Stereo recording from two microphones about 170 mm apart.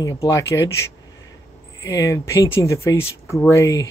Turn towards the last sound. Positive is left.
turn(degrees=20)  # may be behind; listen again after turning